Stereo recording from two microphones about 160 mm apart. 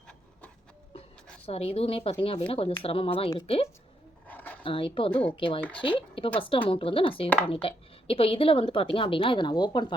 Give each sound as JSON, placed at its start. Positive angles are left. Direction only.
{"t": 1.5, "sound": "a woman's voice", "side_deg": 40}
{"t": 4.3, "sound": "a sound", "side_deg": 10}
{"t": 4.6, "sound": "a woman's voice", "side_deg": 35}